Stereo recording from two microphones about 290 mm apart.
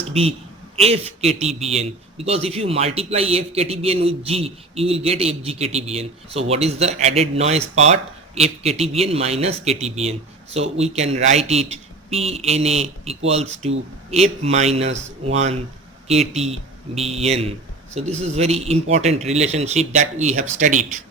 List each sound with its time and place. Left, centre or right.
0.1 s a man's voice: centre